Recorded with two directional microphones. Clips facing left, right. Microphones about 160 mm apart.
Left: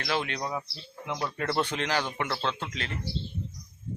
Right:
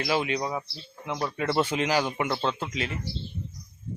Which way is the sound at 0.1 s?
10° right (ahead or behind).